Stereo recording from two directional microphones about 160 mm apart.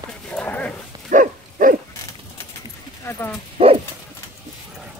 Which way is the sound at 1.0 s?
60° right (ahead or behind).